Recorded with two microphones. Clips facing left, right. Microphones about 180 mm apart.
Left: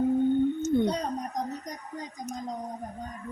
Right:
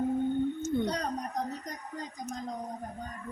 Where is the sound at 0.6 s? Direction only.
20° left (ahead or behind).